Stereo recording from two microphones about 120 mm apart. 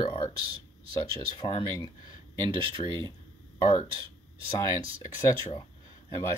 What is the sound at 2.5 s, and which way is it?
Speech, 45° right (ahead or behind).